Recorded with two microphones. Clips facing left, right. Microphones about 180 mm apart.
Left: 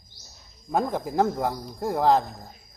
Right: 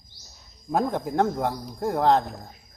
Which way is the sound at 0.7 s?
Centre (ahead or behind).